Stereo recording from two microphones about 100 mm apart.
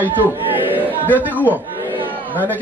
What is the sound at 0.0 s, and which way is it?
A man's voice, 20° right (ahead or behind).